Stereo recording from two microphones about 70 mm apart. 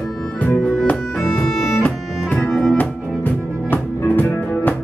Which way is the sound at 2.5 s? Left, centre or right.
Centre.